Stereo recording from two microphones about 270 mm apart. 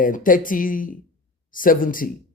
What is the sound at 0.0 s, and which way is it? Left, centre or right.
A man's voice, left.